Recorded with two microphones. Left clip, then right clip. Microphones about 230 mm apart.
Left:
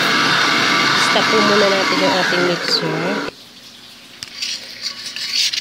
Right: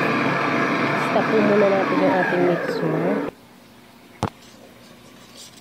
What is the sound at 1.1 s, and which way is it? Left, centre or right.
Speech, left.